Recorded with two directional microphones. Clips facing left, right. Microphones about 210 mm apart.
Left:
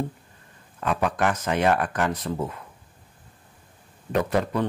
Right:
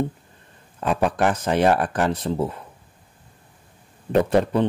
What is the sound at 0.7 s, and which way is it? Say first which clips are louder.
Speech: right 3 dB; 30° right (ahead or behind).